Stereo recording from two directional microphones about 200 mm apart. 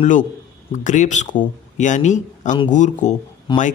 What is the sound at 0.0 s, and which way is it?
A man's voice, 40° left (ahead or behind).